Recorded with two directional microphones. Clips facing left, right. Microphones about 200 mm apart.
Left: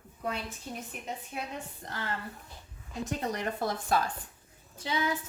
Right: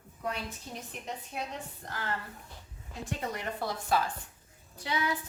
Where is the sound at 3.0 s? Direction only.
45° left (ahead or behind).